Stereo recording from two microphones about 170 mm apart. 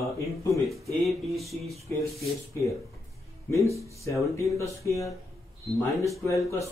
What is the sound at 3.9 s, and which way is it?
Speech, 20° left (ahead or behind).